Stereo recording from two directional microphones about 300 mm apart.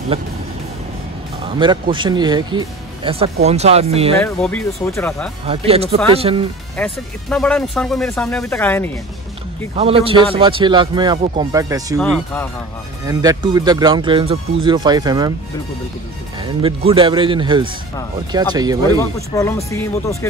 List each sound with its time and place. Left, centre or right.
1.6 s speech: centre
4.2 s speech: centre
5.5 s speech: centre
6.8 s speech: centre
9.8 s speech: centre
13.0 s speech: centre
16.6 s speech: centre
18.9 s speech: centre